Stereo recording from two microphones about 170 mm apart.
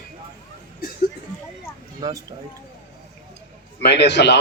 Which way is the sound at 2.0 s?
20° right (ahead or behind).